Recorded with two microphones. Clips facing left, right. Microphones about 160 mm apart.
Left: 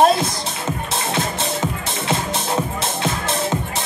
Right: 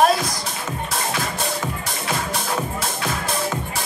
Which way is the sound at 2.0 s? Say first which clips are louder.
Left 3 dB; 25° left (ahead or behind).